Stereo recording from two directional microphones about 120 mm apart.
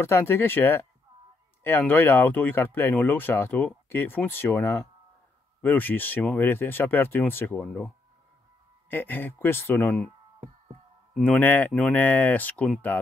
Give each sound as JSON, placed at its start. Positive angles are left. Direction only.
{"t": 0.0, "sound": "speech", "side_deg": 20}
{"t": 11.1, "sound": "speech", "side_deg": 15}